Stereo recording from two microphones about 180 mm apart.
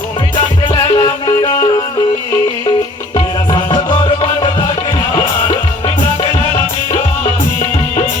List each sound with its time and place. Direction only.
0.3 s music: 25° left (ahead or behind)
3.5 s music: 25° left (ahead or behind)